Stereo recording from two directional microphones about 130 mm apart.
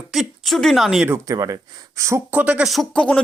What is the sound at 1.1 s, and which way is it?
Speech, 25° right (ahead or behind).